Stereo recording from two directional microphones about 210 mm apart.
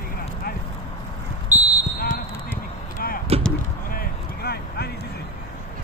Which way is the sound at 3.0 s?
45° left (ahead or behind).